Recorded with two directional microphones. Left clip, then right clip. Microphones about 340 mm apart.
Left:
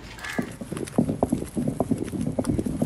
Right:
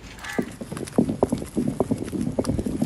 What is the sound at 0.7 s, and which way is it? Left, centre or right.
Clip-clop, centre.